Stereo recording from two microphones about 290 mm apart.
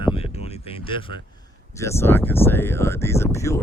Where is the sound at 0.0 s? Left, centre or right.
Centre.